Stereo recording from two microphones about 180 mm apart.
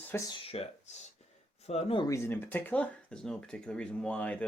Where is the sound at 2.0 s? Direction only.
15° left (ahead or behind).